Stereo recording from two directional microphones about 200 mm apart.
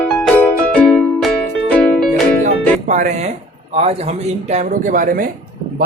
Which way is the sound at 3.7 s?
30° right (ahead or behind).